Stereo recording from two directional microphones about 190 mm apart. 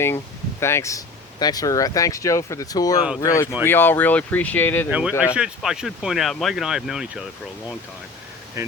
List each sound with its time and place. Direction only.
0.6 s speech: 15° left (ahead or behind)
4.9 s speech: 5° right (ahead or behind)
8.6 s speech: 15° right (ahead or behind)